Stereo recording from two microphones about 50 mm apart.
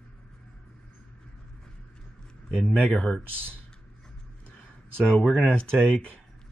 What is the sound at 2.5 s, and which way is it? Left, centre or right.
Speech, left.